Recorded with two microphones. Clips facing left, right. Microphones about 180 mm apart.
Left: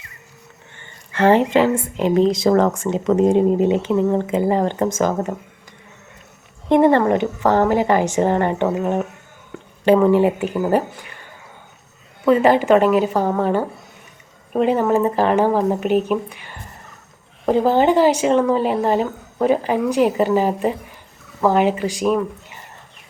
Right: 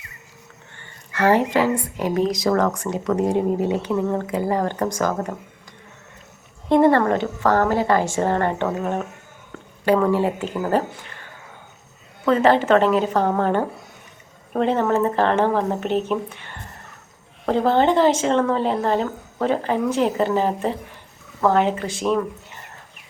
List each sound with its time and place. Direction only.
1.1 s speech: 25° left (ahead or behind)
6.7 s speech: 15° left (ahead or behind)
12.2 s speech: 10° left (ahead or behind)